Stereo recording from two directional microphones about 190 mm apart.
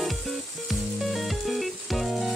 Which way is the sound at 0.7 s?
Centre (ahead or behind).